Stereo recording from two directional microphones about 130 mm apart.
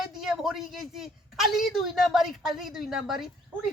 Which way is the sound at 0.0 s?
5° right (ahead or behind).